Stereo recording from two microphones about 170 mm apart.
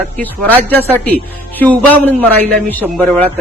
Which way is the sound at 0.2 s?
10° left (ahead or behind).